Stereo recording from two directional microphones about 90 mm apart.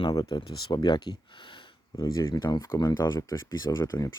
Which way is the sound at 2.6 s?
35° left (ahead or behind).